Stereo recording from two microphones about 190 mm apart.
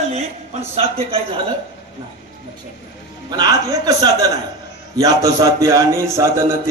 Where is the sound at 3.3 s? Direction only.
20° right (ahead or behind).